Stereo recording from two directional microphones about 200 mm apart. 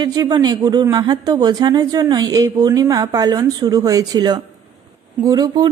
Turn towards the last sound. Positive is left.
turn(degrees=-20)  # may be behind; listen again after turning